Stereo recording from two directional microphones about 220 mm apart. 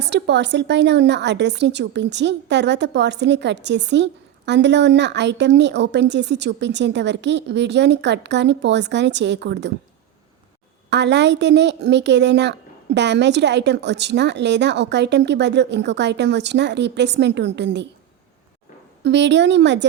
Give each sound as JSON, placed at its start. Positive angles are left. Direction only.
{"t": 0.0, "sound": "a woman's voice", "side_deg": -50}
{"t": 10.8, "sound": "a woman's voice", "side_deg": -50}
{"t": 19.0, "sound": "a woman's voice", "side_deg": -55}